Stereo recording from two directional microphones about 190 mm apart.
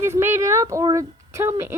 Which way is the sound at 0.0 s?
15° right (ahead or behind).